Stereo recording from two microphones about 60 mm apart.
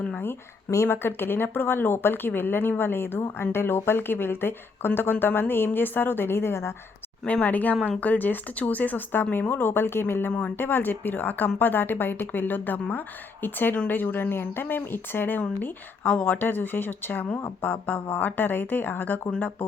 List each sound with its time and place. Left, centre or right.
0.9 s speech: left
7.3 s speech: left